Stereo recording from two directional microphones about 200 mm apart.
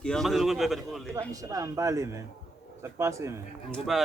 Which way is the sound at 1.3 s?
15° right (ahead or behind).